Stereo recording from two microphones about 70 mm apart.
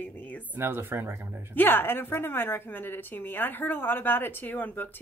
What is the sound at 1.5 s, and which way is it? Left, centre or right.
A woman's voice, left.